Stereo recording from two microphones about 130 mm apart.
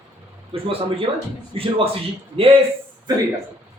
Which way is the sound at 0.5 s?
45° right (ahead or behind).